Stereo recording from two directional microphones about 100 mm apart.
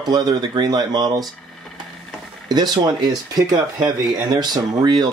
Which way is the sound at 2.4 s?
40° right (ahead or behind).